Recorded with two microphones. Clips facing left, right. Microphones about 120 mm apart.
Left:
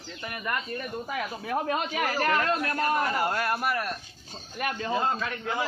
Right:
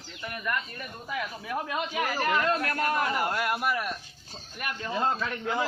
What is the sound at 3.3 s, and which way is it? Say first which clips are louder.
Speech: left 1 dB; 5° right (ahead or behind).